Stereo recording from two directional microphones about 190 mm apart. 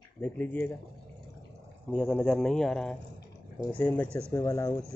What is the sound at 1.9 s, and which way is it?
Speech, 5° left (ahead or behind).